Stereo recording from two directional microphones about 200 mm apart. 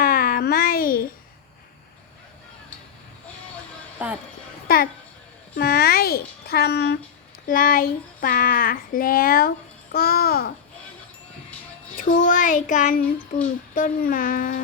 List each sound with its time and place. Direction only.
0.0 s babbling: 45° left (ahead or behind)
4.0 s speech: 10° right (ahead or behind)
5.5 s speech: 50° left (ahead or behind)
11.9 s speech: 45° left (ahead or behind)